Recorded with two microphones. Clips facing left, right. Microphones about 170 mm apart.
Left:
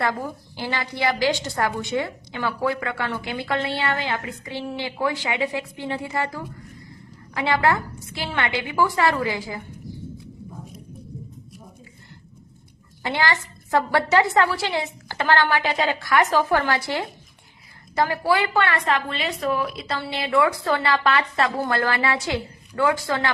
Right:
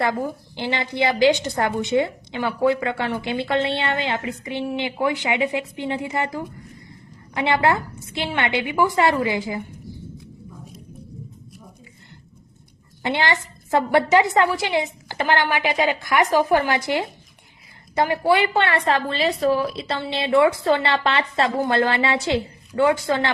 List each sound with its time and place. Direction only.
0.0 s a woman's voice: 20° right (ahead or behind)
13.0 s a woman's voice: 25° right (ahead or behind)